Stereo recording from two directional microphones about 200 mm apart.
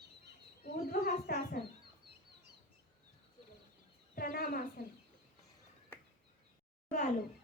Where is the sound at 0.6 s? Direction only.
50° left (ahead or behind).